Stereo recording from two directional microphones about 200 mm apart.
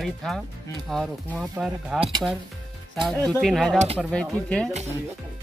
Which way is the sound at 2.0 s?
20° right (ahead or behind).